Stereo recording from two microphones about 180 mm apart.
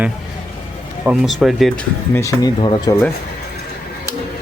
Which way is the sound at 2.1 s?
20° left (ahead or behind).